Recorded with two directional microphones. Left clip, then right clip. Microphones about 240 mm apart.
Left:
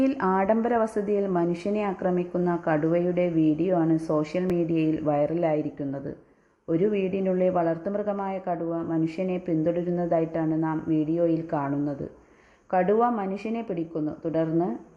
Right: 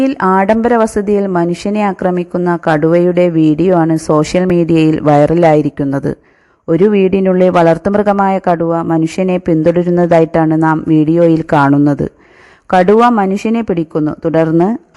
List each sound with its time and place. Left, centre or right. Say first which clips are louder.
0.0 s a woman's voice: right 13 dB; right